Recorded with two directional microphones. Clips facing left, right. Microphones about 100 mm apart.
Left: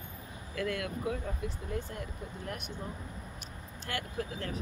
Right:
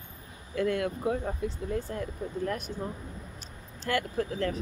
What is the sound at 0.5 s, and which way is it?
Speech, 35° right (ahead or behind).